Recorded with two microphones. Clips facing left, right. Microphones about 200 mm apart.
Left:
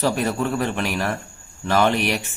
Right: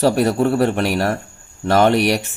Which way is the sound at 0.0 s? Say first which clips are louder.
Right 6 dB; 35° right (ahead or behind).